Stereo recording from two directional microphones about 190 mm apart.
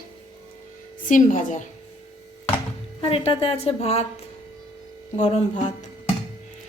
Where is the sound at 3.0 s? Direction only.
30° left (ahead or behind).